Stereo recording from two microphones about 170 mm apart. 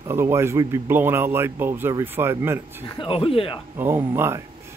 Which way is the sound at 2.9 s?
30° left (ahead or behind).